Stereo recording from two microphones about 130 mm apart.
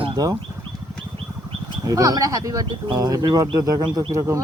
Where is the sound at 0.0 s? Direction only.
35° right (ahead or behind).